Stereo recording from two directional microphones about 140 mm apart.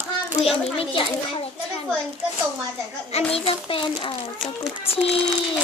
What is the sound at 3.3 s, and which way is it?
Speech, 40° left (ahead or behind).